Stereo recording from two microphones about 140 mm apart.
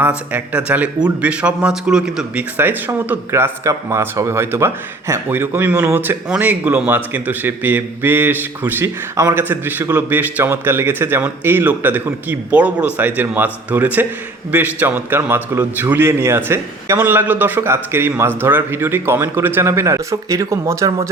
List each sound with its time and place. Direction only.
0.0 s speech: 10° right (ahead or behind)